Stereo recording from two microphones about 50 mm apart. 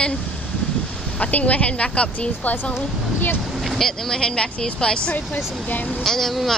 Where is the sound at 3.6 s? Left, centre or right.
Centre.